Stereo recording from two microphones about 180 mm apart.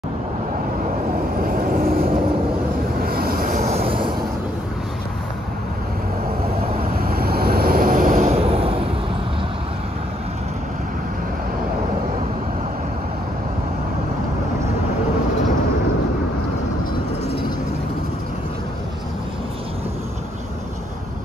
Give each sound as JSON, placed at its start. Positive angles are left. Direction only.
{"t": 1.5, "sound": "vehicle", "side_deg": -55}
{"t": 7.0, "sound": "vehicle", "side_deg": -55}